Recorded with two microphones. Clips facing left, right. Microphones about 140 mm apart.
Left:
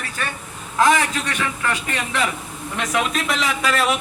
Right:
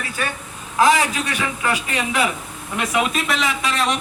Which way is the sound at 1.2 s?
15° right (ahead or behind).